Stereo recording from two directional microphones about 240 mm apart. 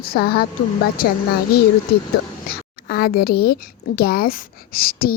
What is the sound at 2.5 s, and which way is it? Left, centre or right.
Speech, left.